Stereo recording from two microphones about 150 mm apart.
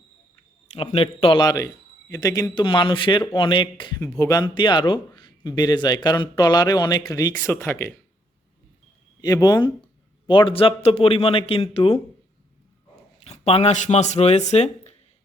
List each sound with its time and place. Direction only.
0.7 s speech: 40° left (ahead or behind)
4.0 s speech: 20° left (ahead or behind)
9.2 s speech: 25° left (ahead or behind); by 11.9 s 40° left (ahead or behind)
13.2 s speech: 45° left (ahead or behind)